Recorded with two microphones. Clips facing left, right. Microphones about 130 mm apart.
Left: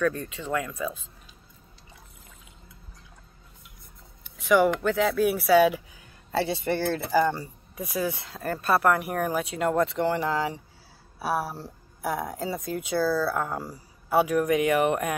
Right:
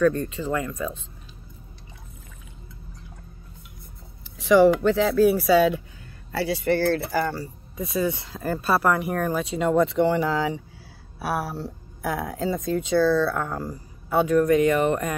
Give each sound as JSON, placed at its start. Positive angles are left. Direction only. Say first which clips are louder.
{"t": 0.0, "sound": "speech", "louder": "right 6 dB", "side_deg": 0}
{"t": 4.4, "sound": "speech", "louder": "right 5 dB", "side_deg": 0}
{"t": 6.3, "sound": "speech", "louder": "right 3 dB", "side_deg": 20}
{"t": 7.7, "sound": "speech", "louder": "right 4 dB", "side_deg": 5}